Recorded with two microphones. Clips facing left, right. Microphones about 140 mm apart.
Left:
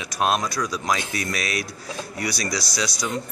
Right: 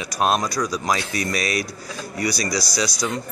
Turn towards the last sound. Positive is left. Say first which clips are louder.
# right 3 dB
turn(degrees=0)  # may be behind; listen again after turning